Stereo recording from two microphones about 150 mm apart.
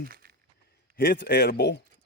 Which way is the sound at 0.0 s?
85° right.